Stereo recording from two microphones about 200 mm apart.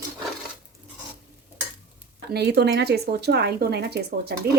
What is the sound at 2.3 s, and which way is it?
A woman's voice, 55° right (ahead or behind).